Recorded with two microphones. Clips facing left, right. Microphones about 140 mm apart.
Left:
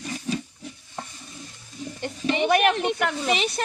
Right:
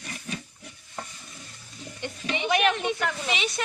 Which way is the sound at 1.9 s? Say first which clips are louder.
Left 7 dB; 40° left (ahead or behind).